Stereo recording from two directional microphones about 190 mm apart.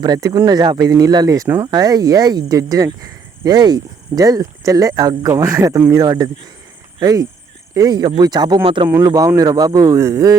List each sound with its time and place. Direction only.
0.0 s speech: 20° right (ahead or behind)